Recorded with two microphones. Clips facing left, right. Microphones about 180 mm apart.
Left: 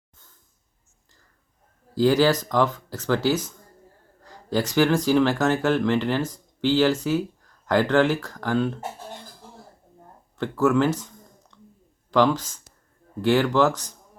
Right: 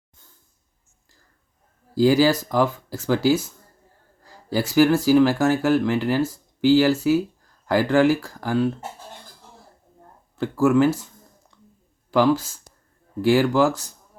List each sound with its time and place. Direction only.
2.0 s speech: 10° right (ahead or behind)
10.3 s a sound: 10° right (ahead or behind)
12.1 s speech: 10° right (ahead or behind)